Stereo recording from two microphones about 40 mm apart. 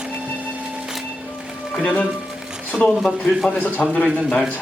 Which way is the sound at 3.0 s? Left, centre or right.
Centre.